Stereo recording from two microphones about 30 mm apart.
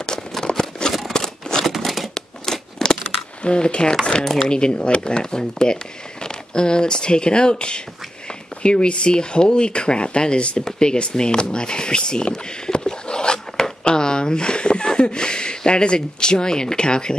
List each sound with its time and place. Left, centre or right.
0.8 s scissors: left
1.6 s crumpling: centre
2.1 s a sound: centre
3.4 s speech: left
4.2 s speech: centre
4.5 s speech: left
13.8 s a sound: left
14.9 s speech: left